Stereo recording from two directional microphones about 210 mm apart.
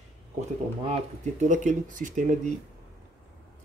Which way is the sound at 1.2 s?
35° right (ahead or behind).